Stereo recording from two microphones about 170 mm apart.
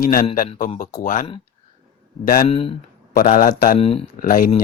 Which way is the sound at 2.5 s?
30° left (ahead or behind).